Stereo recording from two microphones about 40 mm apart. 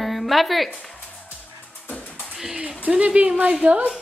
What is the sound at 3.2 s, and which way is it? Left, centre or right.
Speech, right.